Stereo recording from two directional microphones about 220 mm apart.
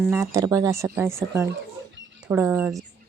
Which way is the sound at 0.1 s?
15° right (ahead or behind).